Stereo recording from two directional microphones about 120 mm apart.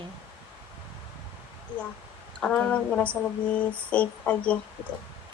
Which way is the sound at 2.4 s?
5° left (ahead or behind).